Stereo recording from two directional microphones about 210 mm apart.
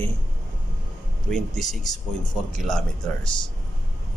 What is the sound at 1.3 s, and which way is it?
Speech, centre (ahead or behind).